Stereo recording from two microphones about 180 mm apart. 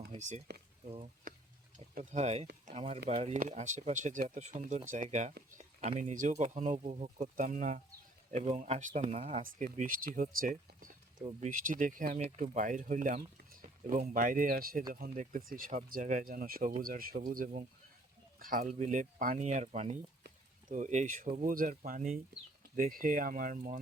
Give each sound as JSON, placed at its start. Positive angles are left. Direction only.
{"t": 0.5, "sound": "speech", "side_deg": -65}
{"t": 0.9, "sound": "speech", "side_deg": -35}
{"t": 11.2, "sound": "speech", "side_deg": -35}
{"t": 20.2, "sound": "a sound", "side_deg": -45}
{"t": 21.2, "sound": "speech", "side_deg": -45}